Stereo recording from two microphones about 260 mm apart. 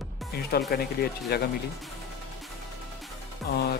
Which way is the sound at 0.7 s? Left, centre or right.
Left.